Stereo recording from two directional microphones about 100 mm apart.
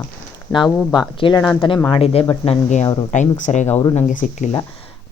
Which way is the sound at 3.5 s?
90° left.